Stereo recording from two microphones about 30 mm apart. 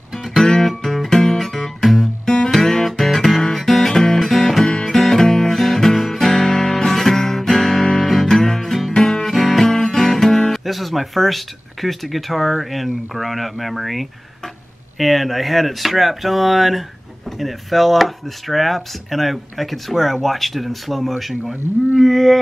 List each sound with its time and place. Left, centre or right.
0.4 s music: centre
1.4 s music: centre
2.2 s music: left
2.7 s guitar: centre
3.5 s music: centre
4.6 s music: left
5.1 s music: centre
5.5 s music: centre
6.1 s guitar: centre
8.9 s music: left
9.2 s music: centre
10.5 s speech: centre